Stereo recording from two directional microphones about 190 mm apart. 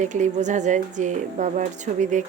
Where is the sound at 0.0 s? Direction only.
40° right (ahead or behind).